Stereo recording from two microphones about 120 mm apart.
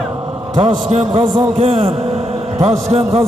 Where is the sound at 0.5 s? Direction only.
65° right (ahead or behind).